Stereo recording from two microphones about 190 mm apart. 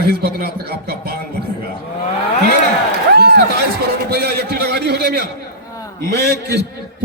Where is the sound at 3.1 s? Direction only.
60° right (ahead or behind).